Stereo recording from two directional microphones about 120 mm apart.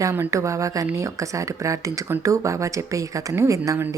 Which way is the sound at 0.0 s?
25° right (ahead or behind).